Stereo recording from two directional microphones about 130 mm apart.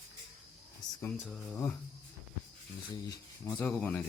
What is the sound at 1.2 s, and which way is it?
Speech, centre (ahead or behind).